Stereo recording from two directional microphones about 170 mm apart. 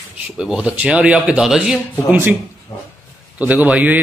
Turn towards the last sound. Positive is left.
turn(degrees=-10)  # may be behind; listen again after turning